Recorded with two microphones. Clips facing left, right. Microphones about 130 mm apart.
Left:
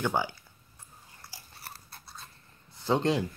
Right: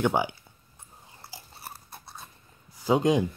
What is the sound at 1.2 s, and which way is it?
Babbling, 25° right (ahead or behind).